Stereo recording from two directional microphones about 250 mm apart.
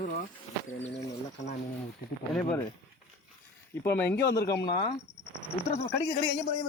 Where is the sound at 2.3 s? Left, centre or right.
Centre.